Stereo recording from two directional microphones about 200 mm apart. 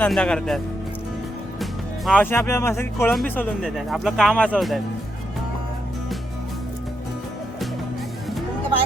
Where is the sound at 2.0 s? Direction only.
10° left (ahead or behind).